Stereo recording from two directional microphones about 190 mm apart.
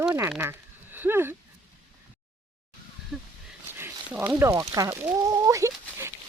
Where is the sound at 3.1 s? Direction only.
Centre (ahead or behind).